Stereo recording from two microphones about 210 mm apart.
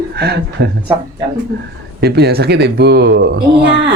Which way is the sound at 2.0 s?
50° right (ahead or behind).